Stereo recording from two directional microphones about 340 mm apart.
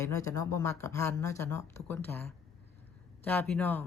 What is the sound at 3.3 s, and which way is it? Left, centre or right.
Speech, centre.